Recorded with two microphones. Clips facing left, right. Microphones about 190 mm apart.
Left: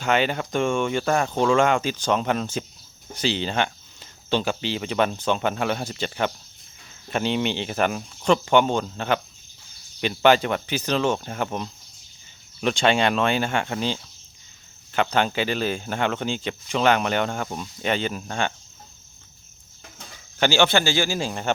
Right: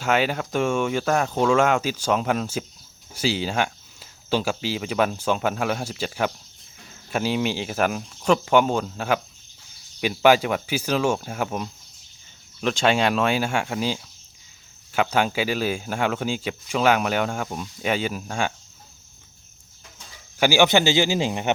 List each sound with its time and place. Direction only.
0.0 s speech: 5° right (ahead or behind)
20.4 s speech: 15° right (ahead or behind)